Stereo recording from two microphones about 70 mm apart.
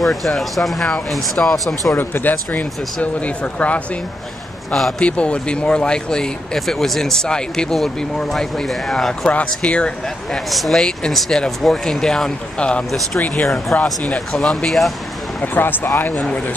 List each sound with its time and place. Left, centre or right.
0.0 s speech: centre
2.0 s speech: left
4.7 s speech: centre
5.0 s speech: centre
10.5 s speech: centre; by 13.9 s left
14.3 s speech: centre
15.4 s speech: left
16.2 s speech: centre